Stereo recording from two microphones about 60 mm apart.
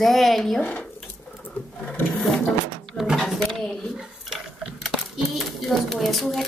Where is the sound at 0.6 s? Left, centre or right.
Left.